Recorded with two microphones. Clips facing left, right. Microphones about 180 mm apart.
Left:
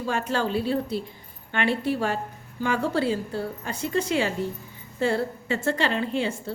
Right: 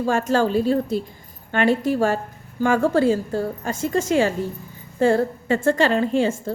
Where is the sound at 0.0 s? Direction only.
45° right (ahead or behind).